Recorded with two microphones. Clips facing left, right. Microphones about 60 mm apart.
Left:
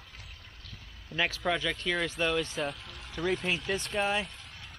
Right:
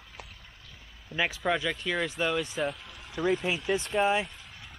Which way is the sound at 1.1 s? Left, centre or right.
Centre.